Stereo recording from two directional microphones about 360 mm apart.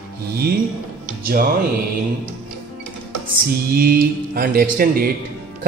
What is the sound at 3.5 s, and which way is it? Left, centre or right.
A man's voice, right.